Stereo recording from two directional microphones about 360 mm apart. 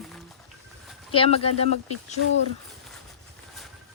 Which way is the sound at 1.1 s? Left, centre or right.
Centre.